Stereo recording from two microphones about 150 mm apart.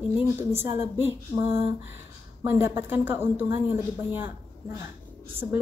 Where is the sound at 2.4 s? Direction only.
15° right (ahead or behind).